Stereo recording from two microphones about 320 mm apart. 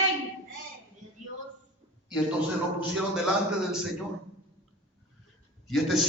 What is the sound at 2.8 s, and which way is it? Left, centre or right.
Speech, centre.